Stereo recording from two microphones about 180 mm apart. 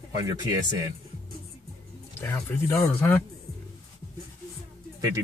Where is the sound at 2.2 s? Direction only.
15° left (ahead or behind).